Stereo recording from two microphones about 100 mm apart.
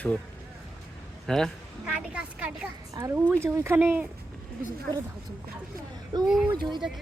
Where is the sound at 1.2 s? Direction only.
5° left (ahead or behind).